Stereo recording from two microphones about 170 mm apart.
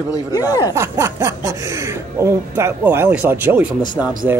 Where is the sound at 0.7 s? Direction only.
15° right (ahead or behind).